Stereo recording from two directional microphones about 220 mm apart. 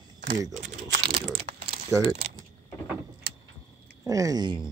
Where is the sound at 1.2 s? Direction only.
25° right (ahead or behind).